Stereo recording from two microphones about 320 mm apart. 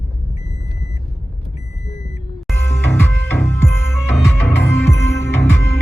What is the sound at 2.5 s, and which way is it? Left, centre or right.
Music, centre.